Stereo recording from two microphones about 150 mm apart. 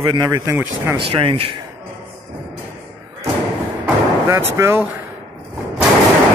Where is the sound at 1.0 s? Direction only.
35° right (ahead or behind).